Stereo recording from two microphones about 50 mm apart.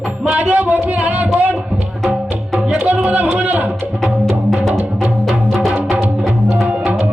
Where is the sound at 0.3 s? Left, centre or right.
Right.